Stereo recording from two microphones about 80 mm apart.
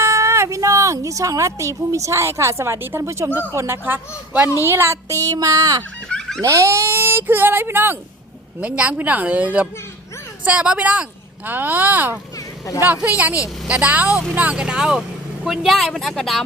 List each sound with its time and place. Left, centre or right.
0.0 s speech: right
6.1 s fowl: centre
6.4 s a woman's voice: right; by 16.4 s centre